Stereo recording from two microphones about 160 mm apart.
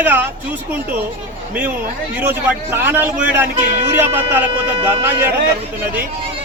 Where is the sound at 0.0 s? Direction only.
10° right (ahead or behind).